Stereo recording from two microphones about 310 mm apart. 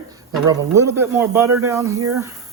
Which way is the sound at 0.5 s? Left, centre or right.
Centre.